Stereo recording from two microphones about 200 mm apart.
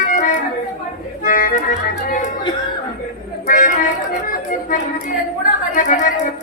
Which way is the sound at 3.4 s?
40° left (ahead or behind).